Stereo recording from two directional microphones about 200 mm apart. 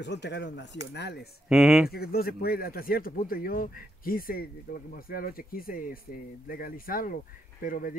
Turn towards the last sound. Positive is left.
turn(degrees=45)  # may be behind; listen again after turning